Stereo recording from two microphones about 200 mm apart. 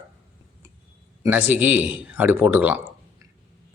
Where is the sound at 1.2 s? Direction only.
10° right (ahead or behind).